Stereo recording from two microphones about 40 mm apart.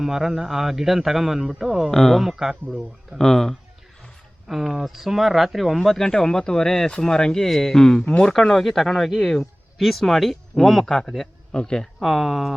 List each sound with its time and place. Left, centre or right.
0.0 s a man's voice: centre
1.9 s speech: centre
2.2 s speech: centre
3.2 s speech: centre
4.6 s speech: centre
5.9 s speech: centre
11.5 s speech: left
11.8 s speech: centre